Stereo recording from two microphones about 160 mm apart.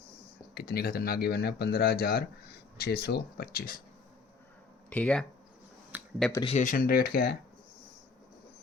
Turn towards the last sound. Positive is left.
turn(degrees=70)  # may be behind; listen again after turning